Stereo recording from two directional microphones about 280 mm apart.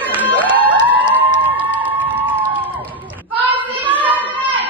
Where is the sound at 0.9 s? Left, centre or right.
Centre.